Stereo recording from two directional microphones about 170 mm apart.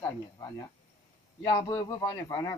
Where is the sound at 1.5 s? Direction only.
20° left (ahead or behind).